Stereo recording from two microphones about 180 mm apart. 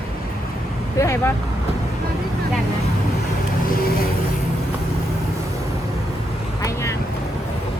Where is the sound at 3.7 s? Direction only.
55° left (ahead or behind).